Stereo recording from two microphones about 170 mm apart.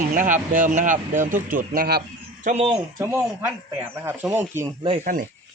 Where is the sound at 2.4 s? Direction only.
40° right (ahead or behind).